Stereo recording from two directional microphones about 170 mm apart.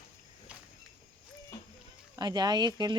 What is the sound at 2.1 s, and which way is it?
Speech, 25° right (ahead or behind).